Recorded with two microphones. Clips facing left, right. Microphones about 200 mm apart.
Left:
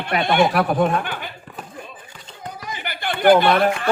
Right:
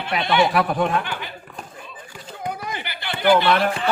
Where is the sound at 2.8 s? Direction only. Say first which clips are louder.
Left 4 dB; 50° left (ahead or behind).